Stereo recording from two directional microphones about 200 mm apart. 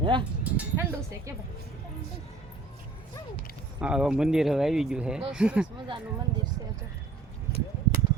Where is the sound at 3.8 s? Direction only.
5° right (ahead or behind).